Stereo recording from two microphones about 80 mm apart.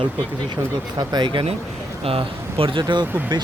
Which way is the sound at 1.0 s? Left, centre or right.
Right.